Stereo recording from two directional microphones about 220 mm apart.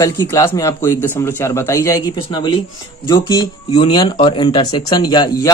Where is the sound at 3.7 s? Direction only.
20° left (ahead or behind).